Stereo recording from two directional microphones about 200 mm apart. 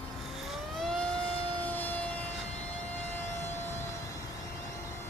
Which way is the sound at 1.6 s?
10° left (ahead or behind).